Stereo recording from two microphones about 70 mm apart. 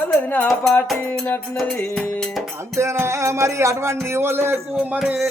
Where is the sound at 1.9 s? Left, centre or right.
Centre.